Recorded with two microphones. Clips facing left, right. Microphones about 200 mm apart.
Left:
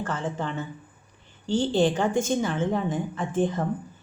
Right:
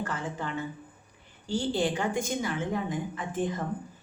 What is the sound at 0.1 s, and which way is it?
Speech, 30° left (ahead or behind).